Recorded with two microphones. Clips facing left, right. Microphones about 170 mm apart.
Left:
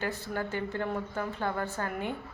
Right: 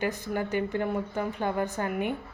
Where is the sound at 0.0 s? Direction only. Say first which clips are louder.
Right 4 dB; 15° right (ahead or behind).